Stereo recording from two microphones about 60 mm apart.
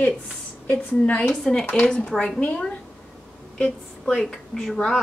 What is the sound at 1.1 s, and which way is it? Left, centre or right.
A woman's voice, left.